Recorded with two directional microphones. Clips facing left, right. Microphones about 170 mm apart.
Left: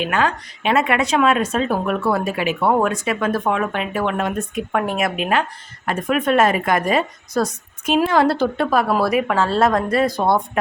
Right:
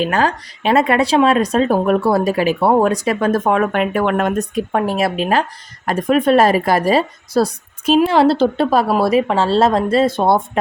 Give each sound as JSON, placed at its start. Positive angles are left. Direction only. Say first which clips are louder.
{"t": 0.0, "sound": "speech", "louder": "right 3 dB", "side_deg": -35}
{"t": 4.5, "sound": "speech", "louder": "right 3 dB", "side_deg": -30}